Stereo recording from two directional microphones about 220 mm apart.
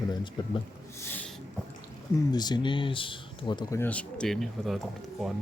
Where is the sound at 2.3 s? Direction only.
20° left (ahead or behind); by 5.3 s centre (ahead or behind).